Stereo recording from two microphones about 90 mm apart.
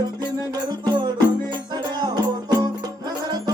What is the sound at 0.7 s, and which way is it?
Music, 55° right (ahead or behind).